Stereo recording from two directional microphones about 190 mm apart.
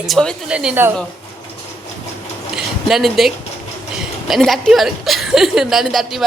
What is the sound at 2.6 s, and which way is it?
A woman's voice, centre (ahead or behind).